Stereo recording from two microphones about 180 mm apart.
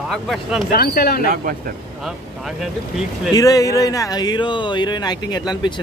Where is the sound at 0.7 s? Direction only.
55° left (ahead or behind).